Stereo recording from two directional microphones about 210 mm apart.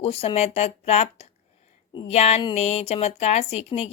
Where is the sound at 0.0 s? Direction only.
30° left (ahead or behind).